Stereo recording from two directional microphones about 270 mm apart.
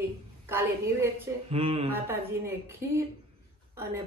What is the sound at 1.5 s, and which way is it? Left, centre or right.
Speech, right.